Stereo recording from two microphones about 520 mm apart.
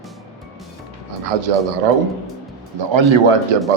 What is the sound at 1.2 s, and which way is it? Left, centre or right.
Speech, right.